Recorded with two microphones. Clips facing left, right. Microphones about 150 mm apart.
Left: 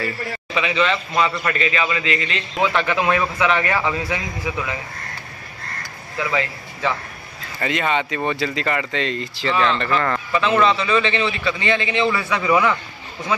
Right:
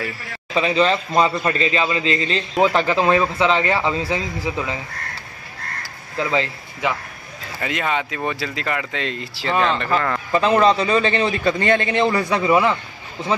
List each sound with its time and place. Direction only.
0.6 s a man's voice: 35° right (ahead or behind)
6.1 s speech: 30° right (ahead or behind)
6.8 s a man's voice: 15° right (ahead or behind)
7.6 s speech: centre (ahead or behind)
10.3 s a man's voice: 40° right (ahead or behind)